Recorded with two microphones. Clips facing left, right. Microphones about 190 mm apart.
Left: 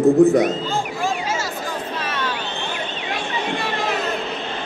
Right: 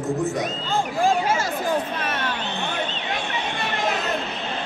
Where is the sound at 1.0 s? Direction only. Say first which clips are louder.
Right 3 dB; 55° right (ahead or behind).